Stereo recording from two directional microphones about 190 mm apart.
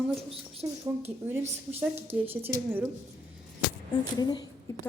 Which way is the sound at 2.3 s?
10° right (ahead or behind).